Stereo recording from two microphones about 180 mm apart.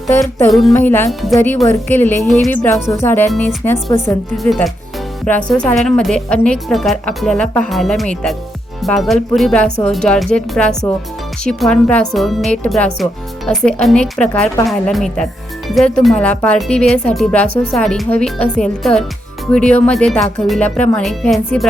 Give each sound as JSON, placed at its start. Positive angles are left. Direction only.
{"t": 0.7, "sound": "speech", "side_deg": 10}
{"t": 2.2, "sound": "a woman's voice", "side_deg": 0}
{"t": 2.6, "sound": "speech", "side_deg": 15}
{"t": 3.2, "sound": "speech", "side_deg": 5}
{"t": 4.4, "sound": "a woman's voice", "side_deg": 0}